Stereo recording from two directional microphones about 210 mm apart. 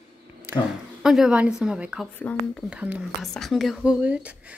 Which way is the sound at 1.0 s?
5° right (ahead or behind).